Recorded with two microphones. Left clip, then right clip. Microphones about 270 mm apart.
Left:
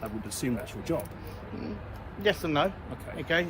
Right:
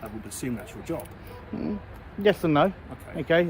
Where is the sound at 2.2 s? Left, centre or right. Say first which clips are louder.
Right 5 dB; right.